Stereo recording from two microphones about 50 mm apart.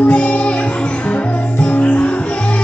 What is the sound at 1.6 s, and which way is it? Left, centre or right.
Music, left.